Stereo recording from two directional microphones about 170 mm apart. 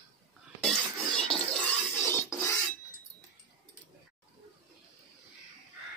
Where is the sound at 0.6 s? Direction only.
5° left (ahead or behind).